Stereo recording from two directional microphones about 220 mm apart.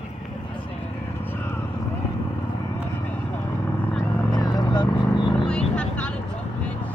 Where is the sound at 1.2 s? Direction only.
10° left (ahead or behind).